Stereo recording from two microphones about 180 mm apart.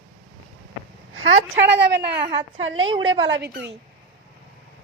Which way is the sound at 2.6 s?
90° right.